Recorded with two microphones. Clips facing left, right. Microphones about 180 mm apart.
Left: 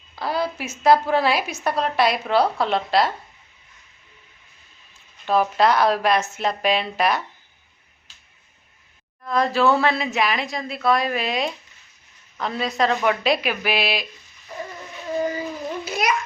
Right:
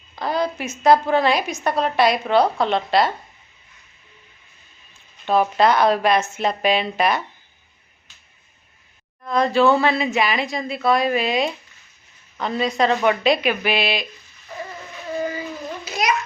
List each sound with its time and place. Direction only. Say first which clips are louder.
0.2 s a woman's voice: right 2 dB; 5° left (ahead or behind)
5.2 s a woman's voice: right 1 dB; centre (ahead or behind)
9.2 s a woman's voice: right 2 dB; centre (ahead or behind)
15.8 s babbling: right 2 dB; 55° left (ahead or behind)